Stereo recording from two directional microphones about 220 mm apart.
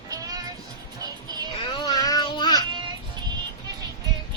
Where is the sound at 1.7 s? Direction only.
20° left (ahead or behind).